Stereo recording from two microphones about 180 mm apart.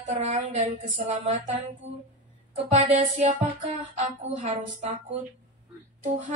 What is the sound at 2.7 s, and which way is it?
A woman's voice, 45° right (ahead or behind).